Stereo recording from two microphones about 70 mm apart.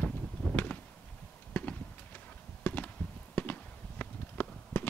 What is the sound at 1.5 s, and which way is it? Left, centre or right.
Clip-clop, left.